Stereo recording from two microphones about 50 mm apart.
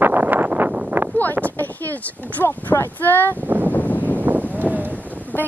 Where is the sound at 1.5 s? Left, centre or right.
Left.